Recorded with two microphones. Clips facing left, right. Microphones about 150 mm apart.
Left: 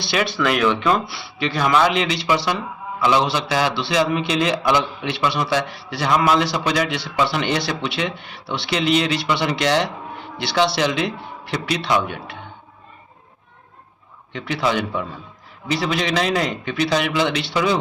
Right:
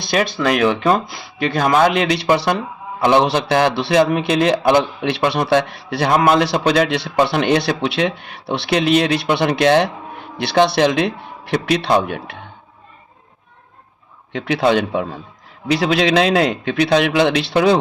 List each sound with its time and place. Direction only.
0.4 s a man's voice: 45° right (ahead or behind)
14.3 s a man's voice: 60° right (ahead or behind)